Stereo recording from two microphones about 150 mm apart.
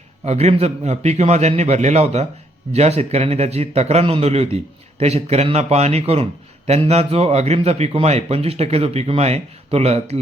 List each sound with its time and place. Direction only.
0.3 s a man's voice: 45° right (ahead or behind)